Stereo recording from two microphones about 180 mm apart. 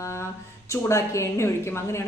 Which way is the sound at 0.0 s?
15° left (ahead or behind).